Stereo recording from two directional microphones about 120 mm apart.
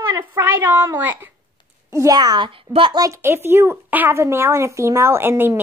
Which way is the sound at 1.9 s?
30° right (ahead or behind).